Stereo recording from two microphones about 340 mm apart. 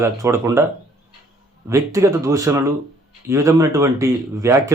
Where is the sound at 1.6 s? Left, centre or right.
Centre.